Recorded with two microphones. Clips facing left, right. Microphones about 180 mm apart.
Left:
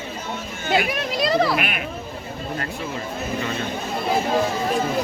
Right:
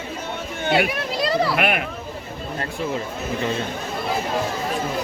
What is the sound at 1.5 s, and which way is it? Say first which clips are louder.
Speech: right 4 dB; 60° right (ahead or behind).